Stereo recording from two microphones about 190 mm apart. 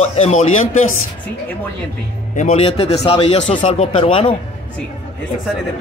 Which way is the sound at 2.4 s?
35° left (ahead or behind).